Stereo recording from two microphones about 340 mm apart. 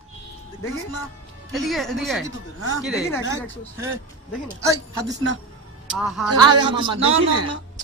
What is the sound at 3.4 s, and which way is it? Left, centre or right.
Speech, centre.